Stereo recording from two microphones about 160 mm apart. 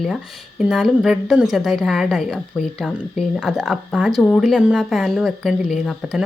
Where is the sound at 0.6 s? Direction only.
5° right (ahead or behind).